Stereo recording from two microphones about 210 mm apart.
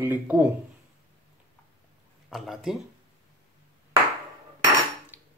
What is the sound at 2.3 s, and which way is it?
Speech, centre (ahead or behind).